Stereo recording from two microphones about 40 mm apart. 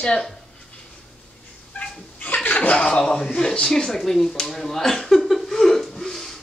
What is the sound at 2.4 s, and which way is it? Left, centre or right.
Chuckle, left.